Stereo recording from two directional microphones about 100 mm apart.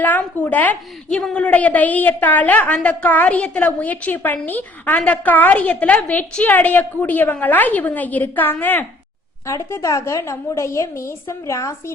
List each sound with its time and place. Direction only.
0.0 s a woman's voice: 15° left (ahead or behind)